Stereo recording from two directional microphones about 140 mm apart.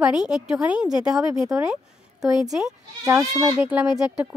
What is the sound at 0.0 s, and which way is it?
Speech, 5° right (ahead or behind).